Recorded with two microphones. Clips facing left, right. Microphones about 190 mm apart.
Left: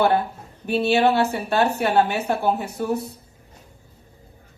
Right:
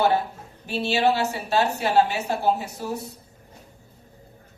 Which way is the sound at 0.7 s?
55° left (ahead or behind).